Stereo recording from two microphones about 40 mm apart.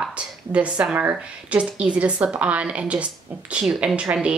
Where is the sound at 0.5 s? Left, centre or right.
Right.